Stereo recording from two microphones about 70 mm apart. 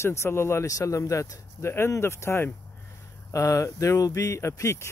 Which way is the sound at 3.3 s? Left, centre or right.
Left.